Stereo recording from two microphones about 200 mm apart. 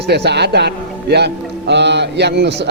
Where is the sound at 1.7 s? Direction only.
60° right (ahead or behind).